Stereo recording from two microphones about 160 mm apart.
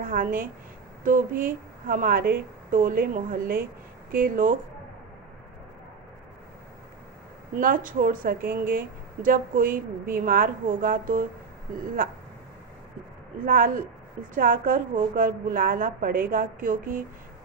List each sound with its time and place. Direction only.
0.0 s speech: 60° right (ahead or behind)
7.5 s speech: 60° right (ahead or behind)
13.4 s speech: 60° right (ahead or behind)